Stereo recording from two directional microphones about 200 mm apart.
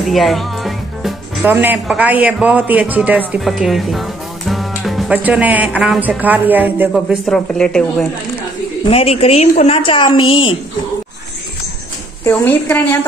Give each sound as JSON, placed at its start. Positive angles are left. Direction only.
{"t": 0.0, "sound": "speech", "side_deg": 0}
{"t": 8.8, "sound": "a woman's voice", "side_deg": 30}
{"t": 12.3, "sound": "a woman's voice", "side_deg": 10}